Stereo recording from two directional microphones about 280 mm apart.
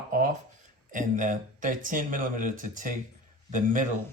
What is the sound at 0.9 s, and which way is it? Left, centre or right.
Speech, right.